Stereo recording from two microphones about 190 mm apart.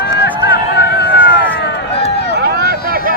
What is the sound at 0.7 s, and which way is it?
Run, 60° left (ahead or behind).